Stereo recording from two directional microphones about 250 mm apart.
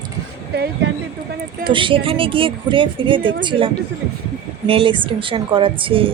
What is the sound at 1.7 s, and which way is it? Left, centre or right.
A woman's voice, centre.